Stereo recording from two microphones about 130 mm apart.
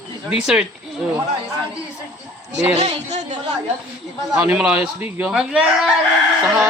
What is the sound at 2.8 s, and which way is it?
Speech, 55° right (ahead or behind).